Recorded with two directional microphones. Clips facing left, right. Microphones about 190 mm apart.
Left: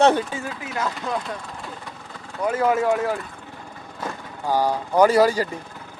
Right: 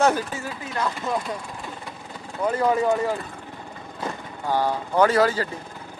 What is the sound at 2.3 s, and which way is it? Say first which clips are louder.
Speech: left 1 dB; 5° left (ahead or behind).